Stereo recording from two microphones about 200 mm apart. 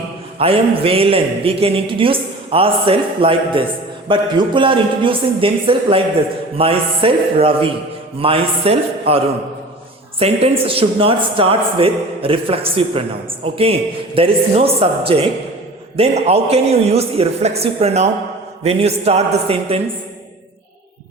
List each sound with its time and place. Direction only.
0.3 s a man's voice: 30° right (ahead or behind)